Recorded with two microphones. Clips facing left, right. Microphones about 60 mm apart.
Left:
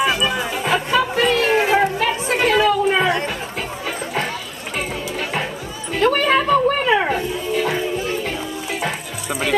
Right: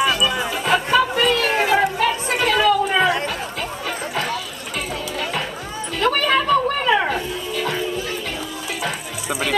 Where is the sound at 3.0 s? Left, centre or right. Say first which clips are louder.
Even; centre.